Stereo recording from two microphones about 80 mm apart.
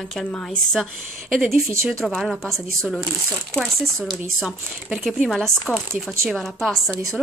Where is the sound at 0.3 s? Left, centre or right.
Centre.